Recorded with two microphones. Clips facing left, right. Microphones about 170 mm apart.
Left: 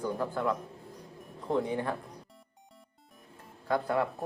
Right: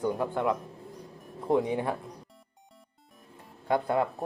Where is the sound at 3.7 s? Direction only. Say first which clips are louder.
Right 2 dB; 20° right (ahead or behind).